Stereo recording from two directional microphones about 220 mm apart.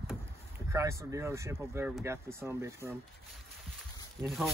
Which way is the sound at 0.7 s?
15° right (ahead or behind).